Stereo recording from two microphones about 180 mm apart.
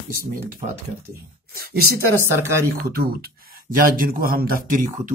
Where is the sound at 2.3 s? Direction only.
15° right (ahead or behind).